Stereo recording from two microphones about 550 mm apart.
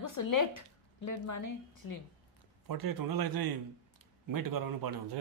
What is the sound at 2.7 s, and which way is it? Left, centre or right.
Speech, right.